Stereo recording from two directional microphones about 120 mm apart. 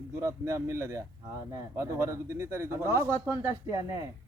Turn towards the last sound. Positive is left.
turn(degrees=-25)  # may be behind; listen again after turning